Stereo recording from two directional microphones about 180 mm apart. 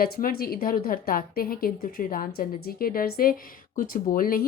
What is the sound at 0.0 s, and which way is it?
A woman's voice, 55° left (ahead or behind).